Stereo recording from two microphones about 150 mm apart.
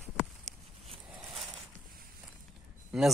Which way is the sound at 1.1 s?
Centre (ahead or behind).